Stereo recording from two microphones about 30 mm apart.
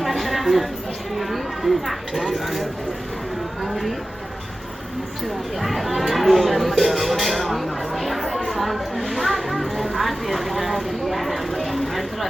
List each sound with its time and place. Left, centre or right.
0.0 s a sound: centre
1.1 s speech: centre
5.5 s speech: centre
8.4 s music: centre